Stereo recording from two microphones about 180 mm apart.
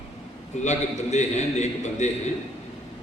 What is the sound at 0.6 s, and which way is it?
A man's voice, 40° left (ahead or behind).